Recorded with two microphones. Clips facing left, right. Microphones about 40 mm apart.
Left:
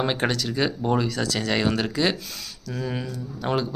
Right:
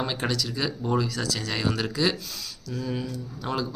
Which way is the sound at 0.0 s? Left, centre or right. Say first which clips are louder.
Left 4 dB; left.